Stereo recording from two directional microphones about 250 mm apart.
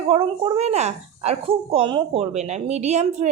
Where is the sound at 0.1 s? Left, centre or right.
Right.